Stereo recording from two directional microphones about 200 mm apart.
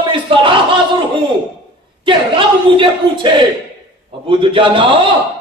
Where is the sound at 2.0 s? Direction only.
25° right (ahead or behind).